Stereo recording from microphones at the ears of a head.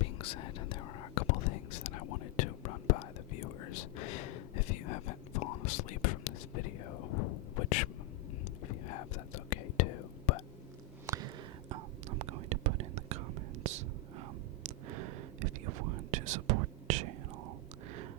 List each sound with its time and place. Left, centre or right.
0.0 s whispering: left
11.7 s whispering: right